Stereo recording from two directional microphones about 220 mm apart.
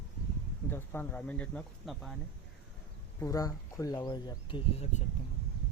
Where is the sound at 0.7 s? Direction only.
10° left (ahead or behind).